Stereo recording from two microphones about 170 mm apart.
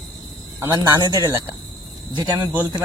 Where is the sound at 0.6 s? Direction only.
20° right (ahead or behind).